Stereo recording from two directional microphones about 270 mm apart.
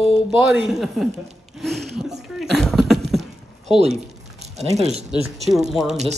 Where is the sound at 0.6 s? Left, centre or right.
Centre.